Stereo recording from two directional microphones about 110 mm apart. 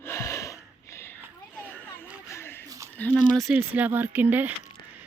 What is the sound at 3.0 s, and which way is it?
Speech, 10° left (ahead or behind).